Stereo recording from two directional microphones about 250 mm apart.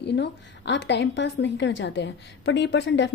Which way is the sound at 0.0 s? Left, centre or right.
Left.